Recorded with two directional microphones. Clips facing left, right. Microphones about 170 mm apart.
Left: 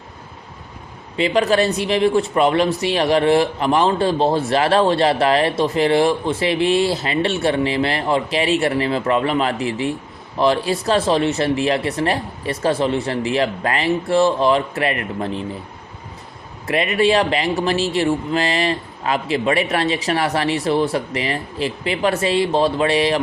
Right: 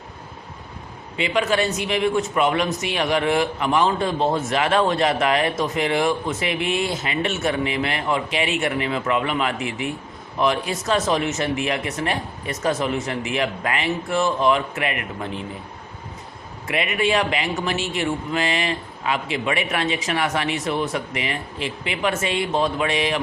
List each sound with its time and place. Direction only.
1.1 s speech: 35° left (ahead or behind)
16.6 s speech: 35° left (ahead or behind)